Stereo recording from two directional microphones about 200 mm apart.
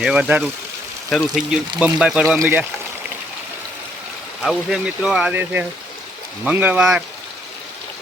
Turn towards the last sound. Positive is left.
turn(degrees=-5)  # may be behind; listen again after turning